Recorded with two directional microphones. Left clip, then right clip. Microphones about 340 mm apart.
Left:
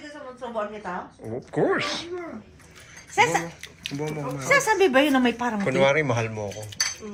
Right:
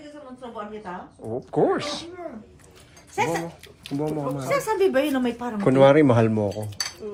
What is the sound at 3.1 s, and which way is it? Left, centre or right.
Speech, centre.